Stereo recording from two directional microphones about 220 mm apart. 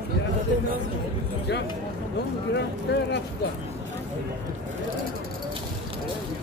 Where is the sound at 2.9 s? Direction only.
50° left (ahead or behind).